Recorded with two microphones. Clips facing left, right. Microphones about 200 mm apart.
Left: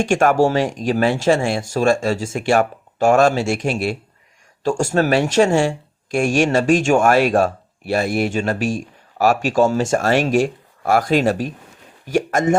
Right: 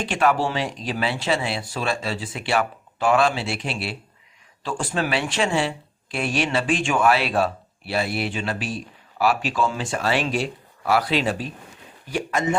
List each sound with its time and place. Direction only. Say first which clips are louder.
0.0 s speech: left 6 dB; 45° left (ahead or behind)